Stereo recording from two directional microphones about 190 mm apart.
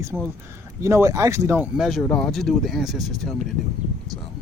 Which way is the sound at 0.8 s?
15° right (ahead or behind).